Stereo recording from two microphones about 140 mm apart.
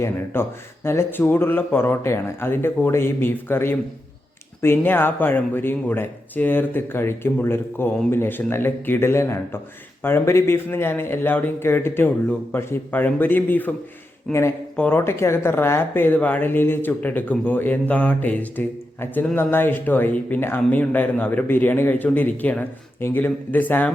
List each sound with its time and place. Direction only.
0.3 s speech: 15° left (ahead or behind)